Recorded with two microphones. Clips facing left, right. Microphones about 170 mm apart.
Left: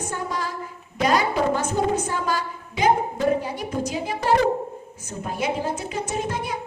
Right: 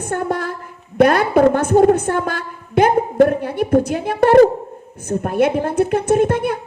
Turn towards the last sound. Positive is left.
turn(degrees=-55)  # may be behind; listen again after turning